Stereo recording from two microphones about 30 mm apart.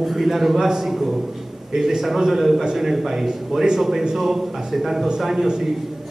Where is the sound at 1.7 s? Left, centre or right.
Centre.